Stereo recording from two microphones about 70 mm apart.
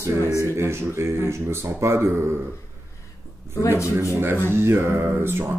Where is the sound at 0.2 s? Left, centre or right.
Left.